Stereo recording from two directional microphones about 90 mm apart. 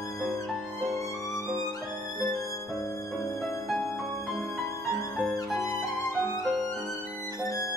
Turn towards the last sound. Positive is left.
turn(degrees=0)  # may be behind; listen again after turning